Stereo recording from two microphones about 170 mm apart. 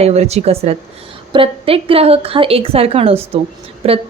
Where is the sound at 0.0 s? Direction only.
40° right (ahead or behind).